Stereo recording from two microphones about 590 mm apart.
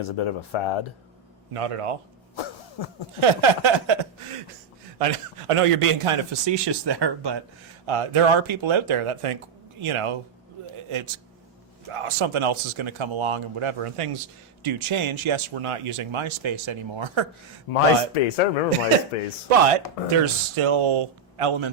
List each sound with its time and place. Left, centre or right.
0.0 s speech: left
1.5 s a man's voice: right
2.3 s cough: left
3.2 s speech: right
4.9 s a man's voice: right
7.9 s a man's voice: right
11.9 s speech: right
17.7 s speech: left
19.5 s a man's voice: right
20.2 s a man's voice: right